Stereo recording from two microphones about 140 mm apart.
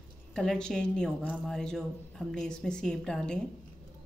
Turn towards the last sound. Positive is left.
turn(degrees=5)  # may be behind; listen again after turning